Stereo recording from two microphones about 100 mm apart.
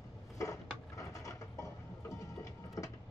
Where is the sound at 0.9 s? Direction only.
35° left (ahead or behind).